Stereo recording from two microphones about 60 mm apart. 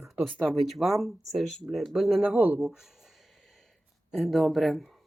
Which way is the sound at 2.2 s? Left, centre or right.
Right.